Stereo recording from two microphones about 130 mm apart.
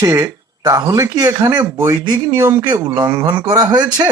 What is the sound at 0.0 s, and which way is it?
Speech, 30° right (ahead or behind).